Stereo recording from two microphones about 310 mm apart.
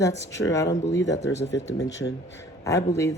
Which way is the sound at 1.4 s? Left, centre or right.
Left.